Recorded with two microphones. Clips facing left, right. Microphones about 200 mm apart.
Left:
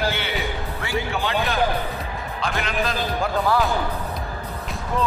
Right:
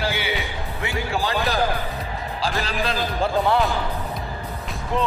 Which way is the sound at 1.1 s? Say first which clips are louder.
Right 1 dB; 35° right (ahead or behind).